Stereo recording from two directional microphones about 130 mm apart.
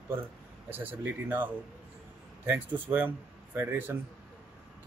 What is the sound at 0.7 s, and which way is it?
Speech, 15° right (ahead or behind).